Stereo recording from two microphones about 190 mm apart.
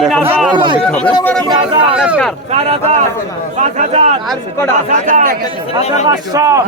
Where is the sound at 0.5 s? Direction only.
25° right (ahead or behind).